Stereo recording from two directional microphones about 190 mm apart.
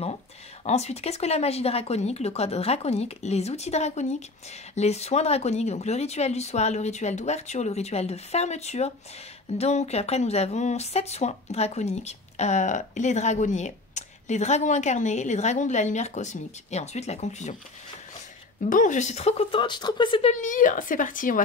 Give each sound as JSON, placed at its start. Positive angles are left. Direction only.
{"t": 0.7, "sound": "speech", "side_deg": 35}
{"t": 18.7, "sound": "speech", "side_deg": 40}